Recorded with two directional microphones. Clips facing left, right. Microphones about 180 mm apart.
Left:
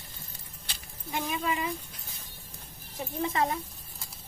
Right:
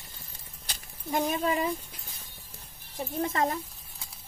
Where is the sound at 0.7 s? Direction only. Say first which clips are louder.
Right 5 dB; 40° right (ahead or behind).